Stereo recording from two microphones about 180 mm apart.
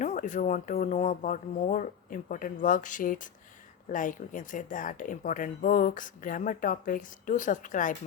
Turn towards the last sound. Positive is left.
turn(degrees=45)  # may be behind; listen again after turning